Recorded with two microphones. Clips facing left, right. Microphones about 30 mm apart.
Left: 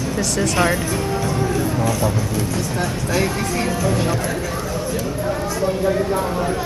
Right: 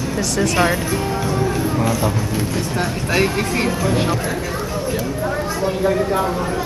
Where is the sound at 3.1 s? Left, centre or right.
Right.